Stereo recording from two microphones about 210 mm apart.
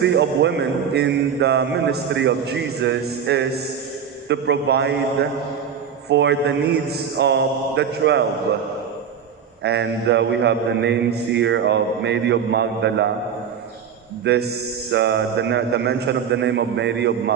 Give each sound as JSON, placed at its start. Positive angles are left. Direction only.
{"t": 0.0, "sound": "music", "side_deg": -55}
{"t": 6.1, "sound": "a man's voice", "side_deg": -55}
{"t": 9.6, "sound": "a man's voice", "side_deg": -55}
{"t": 14.3, "sound": "music", "side_deg": -50}
{"t": 14.9, "sound": "a man's voice", "side_deg": -55}